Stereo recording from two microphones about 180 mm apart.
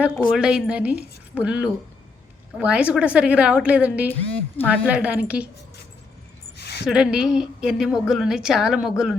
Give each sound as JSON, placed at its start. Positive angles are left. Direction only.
{"t": 0.3, "sound": "a woman's voice", "side_deg": -5}
{"t": 4.5, "sound": "a woman's voice", "side_deg": 10}
{"t": 4.9, "sound": "a woman's voice", "side_deg": -5}
{"t": 6.6, "sound": "a sound", "side_deg": 65}
{"t": 6.8, "sound": "a woman's voice", "side_deg": -5}